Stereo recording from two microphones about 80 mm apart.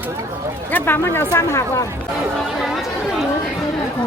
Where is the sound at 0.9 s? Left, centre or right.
Left.